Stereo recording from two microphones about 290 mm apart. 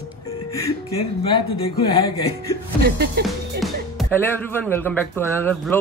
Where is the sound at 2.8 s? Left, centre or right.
Right.